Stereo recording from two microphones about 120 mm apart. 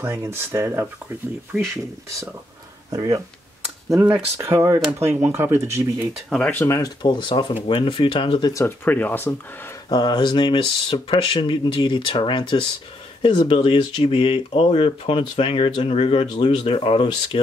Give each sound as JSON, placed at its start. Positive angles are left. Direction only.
{"t": 0.0, "sound": "speech", "side_deg": -20}
{"t": 4.4, "sound": "speech", "side_deg": -25}
{"t": 6.1, "sound": "speech", "side_deg": 5}
{"t": 6.6, "sound": "speech", "side_deg": 25}
{"t": 7.0, "sound": "speech", "side_deg": 40}
{"t": 8.6, "sound": "speech", "side_deg": 15}
{"t": 9.8, "sound": "speech", "side_deg": 40}